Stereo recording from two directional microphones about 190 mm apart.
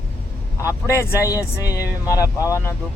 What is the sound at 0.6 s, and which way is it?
Speech, 15° left (ahead or behind).